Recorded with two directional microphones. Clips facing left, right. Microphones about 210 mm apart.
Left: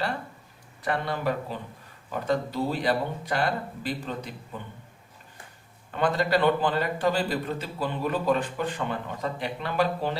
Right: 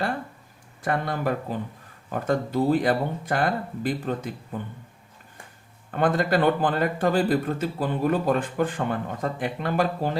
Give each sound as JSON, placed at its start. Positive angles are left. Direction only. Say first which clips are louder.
{"t": 0.8, "sound": "a man's voice", "louder": "right 2 dB", "side_deg": -50}
{"t": 5.9, "sound": "a man's voice", "louder": "right 2 dB", "side_deg": -50}